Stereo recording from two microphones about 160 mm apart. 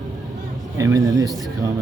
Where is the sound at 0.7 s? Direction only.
20° right (ahead or behind).